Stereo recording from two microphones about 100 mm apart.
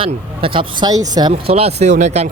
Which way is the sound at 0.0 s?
60° right (ahead or behind).